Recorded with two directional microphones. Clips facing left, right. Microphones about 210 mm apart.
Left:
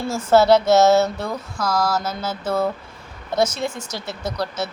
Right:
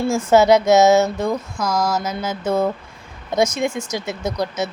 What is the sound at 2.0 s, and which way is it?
Speech, 15° right (ahead or behind).